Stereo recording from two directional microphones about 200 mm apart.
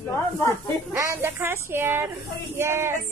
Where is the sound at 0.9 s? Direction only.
10° right (ahead or behind).